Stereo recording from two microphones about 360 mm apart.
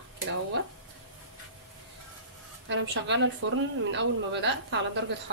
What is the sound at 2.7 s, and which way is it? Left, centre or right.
Speech, right.